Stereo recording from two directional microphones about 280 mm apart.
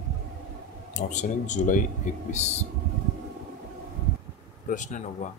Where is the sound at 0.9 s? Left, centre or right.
Left.